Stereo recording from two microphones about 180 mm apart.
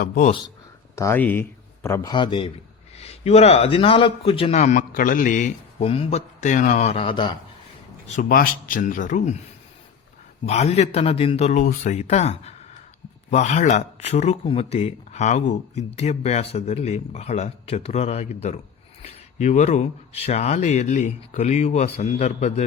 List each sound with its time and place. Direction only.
0.0 s speech: 50° left (ahead or behind)
0.9 s speech: 15° left (ahead or behind)
8.0 s speech: 45° left (ahead or behind)
10.4 s speech: 35° left (ahead or behind)